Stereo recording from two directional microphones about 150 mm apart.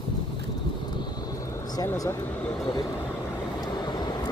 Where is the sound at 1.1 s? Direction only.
20° left (ahead or behind).